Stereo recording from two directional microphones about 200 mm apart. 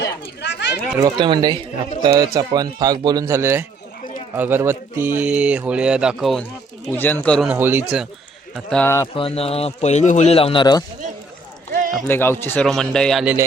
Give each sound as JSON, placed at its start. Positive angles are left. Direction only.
{"t": 0.0, "sound": "chatter", "side_deg": 60}
{"t": 0.9, "sound": "a man's voice", "side_deg": -20}
{"t": 6.8, "sound": "speech", "side_deg": 10}
{"t": 7.4, "sound": "speech", "side_deg": -10}
{"t": 8.5, "sound": "a man's voice", "side_deg": 5}
{"t": 9.1, "sound": "speech", "side_deg": 30}
{"t": 11.7, "sound": "a sound", "side_deg": -45}
{"t": 12.0, "sound": "a man's voice", "side_deg": 10}